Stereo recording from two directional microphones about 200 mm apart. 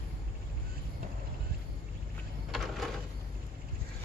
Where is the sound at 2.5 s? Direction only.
Centre (ahead or behind).